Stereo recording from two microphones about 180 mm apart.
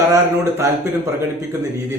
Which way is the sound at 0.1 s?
15° right (ahead or behind).